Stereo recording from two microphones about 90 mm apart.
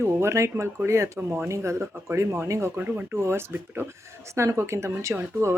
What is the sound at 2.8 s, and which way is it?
Speech, 20° right (ahead or behind).